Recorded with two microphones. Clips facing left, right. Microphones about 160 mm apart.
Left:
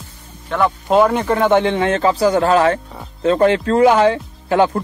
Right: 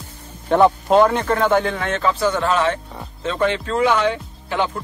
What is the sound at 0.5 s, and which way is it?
Speech, 35° right (ahead or behind).